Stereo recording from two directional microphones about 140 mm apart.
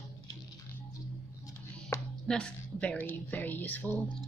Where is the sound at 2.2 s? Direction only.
5° left (ahead or behind).